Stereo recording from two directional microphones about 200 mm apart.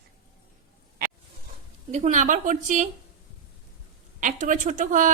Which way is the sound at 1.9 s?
40° right (ahead or behind).